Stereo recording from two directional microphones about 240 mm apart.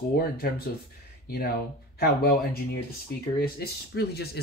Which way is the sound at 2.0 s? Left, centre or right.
Left.